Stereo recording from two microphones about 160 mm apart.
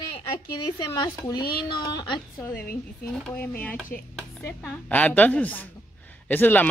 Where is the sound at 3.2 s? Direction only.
10° left (ahead or behind).